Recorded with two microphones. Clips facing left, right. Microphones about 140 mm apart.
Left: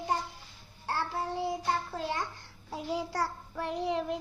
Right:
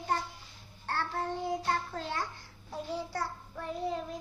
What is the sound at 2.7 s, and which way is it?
Child singing, 90° left.